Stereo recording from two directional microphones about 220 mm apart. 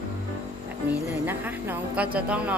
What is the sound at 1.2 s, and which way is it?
A woman's voice, 10° right (ahead or behind).